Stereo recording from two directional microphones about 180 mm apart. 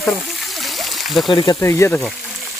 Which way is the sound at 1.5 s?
15° left (ahead or behind).